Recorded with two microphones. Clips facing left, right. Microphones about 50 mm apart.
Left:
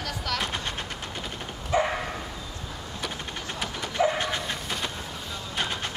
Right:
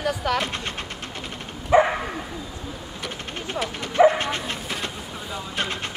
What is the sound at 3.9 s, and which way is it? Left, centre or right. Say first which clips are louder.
Bow-wow: right 8 dB; right.